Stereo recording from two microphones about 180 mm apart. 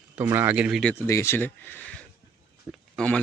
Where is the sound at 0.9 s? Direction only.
15° left (ahead or behind).